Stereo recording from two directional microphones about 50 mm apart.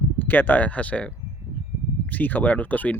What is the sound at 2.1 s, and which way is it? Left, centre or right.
Speech, left.